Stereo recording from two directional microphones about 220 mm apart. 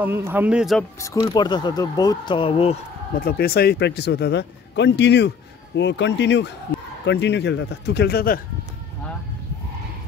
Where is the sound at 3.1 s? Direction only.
45° left (ahead or behind).